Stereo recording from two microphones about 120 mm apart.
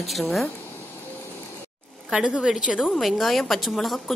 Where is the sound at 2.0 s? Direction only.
5° right (ahead or behind).